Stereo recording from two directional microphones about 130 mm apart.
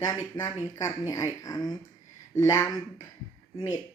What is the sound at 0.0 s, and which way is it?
Speech, 25° left (ahead or behind).